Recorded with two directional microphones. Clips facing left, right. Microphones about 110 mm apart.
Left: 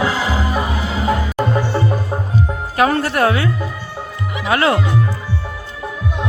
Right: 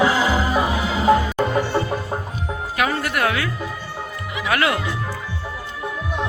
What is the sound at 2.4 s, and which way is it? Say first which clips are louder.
Music: left 8 dB; 35° left (ahead or behind).